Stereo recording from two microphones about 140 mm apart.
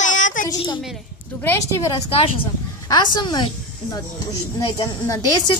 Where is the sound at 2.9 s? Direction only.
30° left (ahead or behind).